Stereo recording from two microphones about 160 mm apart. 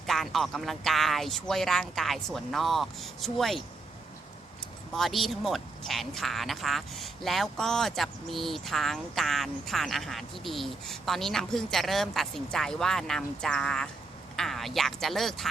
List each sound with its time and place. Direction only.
0.1 s speech: centre (ahead or behind)
4.9 s speech: centre (ahead or behind)